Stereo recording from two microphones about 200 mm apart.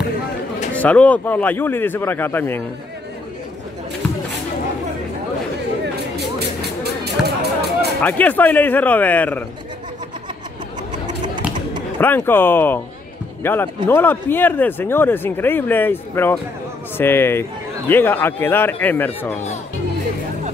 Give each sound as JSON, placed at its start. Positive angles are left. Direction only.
{"t": 0.7, "sound": "speech", "side_deg": 5}
{"t": 6.8, "sound": "a sound", "side_deg": -55}
{"t": 8.0, "sound": "speech", "side_deg": 10}
{"t": 12.0, "sound": "speech", "side_deg": 10}